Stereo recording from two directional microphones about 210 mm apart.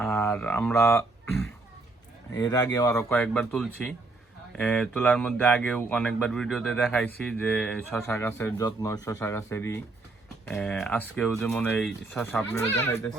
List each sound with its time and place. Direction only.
0.0 s mantra: 10° left (ahead or behind)
0.9 s speech: 5° left (ahead or behind)
2.3 s speech: 20° left (ahead or behind)
3.1 s speech: 5° left (ahead or behind)